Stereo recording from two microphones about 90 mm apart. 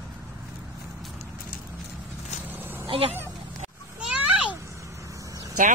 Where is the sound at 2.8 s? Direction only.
90° right.